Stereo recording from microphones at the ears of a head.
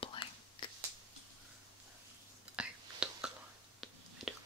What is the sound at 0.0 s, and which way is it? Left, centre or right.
Whispering, left.